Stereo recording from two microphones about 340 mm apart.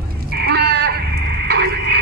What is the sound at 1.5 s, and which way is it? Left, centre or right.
Radio, right.